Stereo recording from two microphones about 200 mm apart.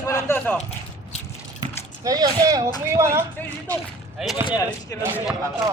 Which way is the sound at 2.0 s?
20° right (ahead or behind).